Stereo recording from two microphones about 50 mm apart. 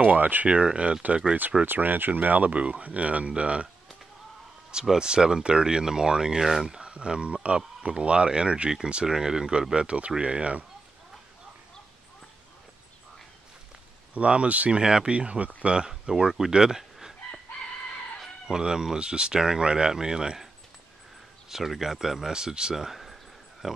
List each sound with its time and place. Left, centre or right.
0.0 s speech: right
0.5 s speech: right
1.7 s speech: right
4.8 s speech: centre
14.1 s speech: right
14.8 s speech: centre
18.5 s speech: centre
21.5 s speech: centre